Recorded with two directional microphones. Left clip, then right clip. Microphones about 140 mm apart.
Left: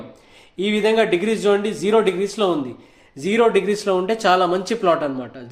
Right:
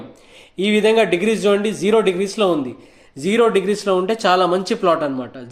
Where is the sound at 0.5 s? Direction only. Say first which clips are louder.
Right 3 dB; 40° right (ahead or behind).